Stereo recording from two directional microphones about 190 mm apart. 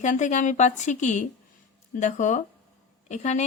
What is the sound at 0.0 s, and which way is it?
Speech, 40° left (ahead or behind).